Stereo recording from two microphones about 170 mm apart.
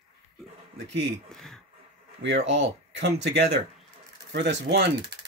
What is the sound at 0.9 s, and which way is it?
Speech, 90° right.